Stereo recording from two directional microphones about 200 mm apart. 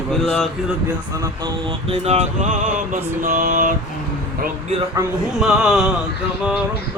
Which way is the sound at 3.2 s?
40° right (ahead or behind).